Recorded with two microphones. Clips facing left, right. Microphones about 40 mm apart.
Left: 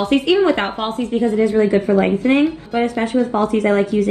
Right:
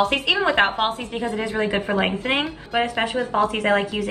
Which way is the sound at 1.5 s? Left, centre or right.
Right.